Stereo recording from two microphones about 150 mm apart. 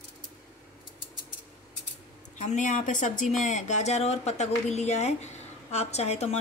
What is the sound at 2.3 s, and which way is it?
Speech, 55° left (ahead or behind).